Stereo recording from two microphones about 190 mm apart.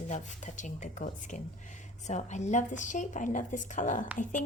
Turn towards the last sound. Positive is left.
turn(degrees=40)  # may be behind; listen again after turning